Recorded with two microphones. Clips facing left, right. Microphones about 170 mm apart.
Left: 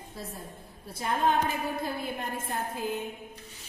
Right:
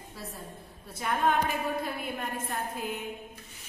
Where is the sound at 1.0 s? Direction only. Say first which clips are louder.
Left 1 dB; 30° left (ahead or behind).